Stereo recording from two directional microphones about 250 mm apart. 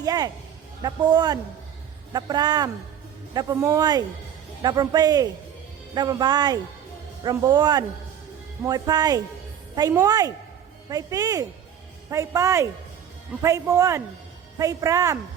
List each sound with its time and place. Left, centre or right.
0.0 s speech: centre